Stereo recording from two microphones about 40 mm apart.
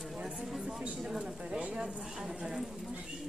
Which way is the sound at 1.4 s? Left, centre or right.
Right.